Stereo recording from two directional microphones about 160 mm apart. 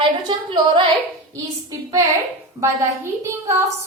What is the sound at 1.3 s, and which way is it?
A woman's voice, 20° right (ahead or behind).